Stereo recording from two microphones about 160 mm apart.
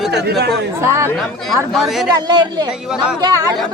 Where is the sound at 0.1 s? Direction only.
90° right.